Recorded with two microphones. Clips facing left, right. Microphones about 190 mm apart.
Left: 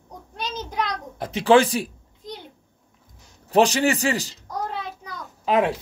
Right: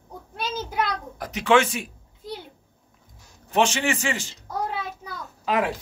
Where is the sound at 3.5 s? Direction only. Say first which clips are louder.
Left 4 dB; 35° left (ahead or behind).